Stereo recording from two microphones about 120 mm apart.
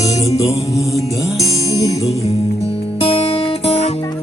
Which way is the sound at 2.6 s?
60° left (ahead or behind).